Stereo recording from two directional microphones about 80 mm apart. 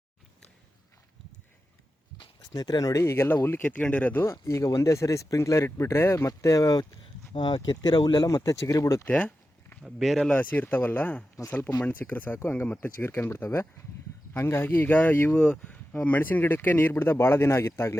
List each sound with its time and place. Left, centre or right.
2.5 s speech: left
3.0 s speech: left
4.3 s speech: left
7.3 s speech: left
7.8 s speech: left
9.0 s a sound: centre
9.8 s speech: centre
10.2 s speech: centre
12.6 s speech: centre
13.0 s speech: left
15.4 s speech: centre
15.6 s speech: left